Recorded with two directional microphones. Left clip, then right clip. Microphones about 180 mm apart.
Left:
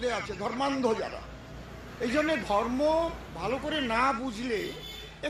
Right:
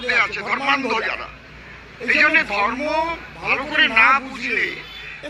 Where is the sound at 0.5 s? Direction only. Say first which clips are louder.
Right 6 dB; 45° right (ahead or behind).